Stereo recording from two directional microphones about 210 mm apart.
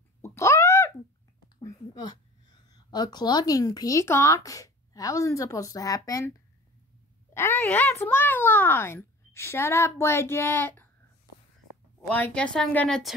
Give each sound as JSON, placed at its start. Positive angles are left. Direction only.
{"t": 0.2, "sound": "wail", "side_deg": 15}
{"t": 1.6, "sound": "a sound", "side_deg": 15}
{"t": 2.7, "sound": "speech", "side_deg": 20}
{"t": 7.3, "sound": "speech", "side_deg": 10}
{"t": 12.1, "sound": "a woman's voice", "side_deg": 5}